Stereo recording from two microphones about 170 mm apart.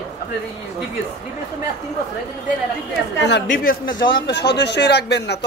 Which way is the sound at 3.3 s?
75° left (ahead or behind).